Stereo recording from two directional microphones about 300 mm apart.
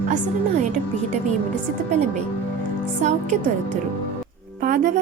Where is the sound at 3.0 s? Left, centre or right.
Right.